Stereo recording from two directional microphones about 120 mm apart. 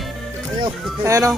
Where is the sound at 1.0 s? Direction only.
25° right (ahead or behind).